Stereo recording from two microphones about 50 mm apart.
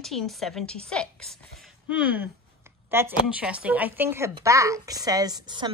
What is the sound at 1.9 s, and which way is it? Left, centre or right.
Speech, right.